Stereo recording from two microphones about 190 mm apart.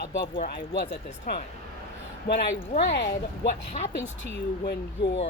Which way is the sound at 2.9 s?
65° left (ahead or behind).